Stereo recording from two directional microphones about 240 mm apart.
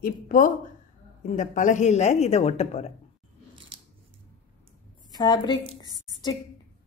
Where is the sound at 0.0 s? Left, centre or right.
Left.